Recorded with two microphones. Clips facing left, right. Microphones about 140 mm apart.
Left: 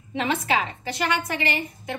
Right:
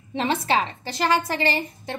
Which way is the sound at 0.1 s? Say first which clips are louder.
Right 2 dB; 30° right (ahead or behind).